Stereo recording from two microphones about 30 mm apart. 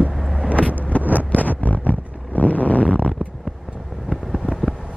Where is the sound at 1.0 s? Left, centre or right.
Right.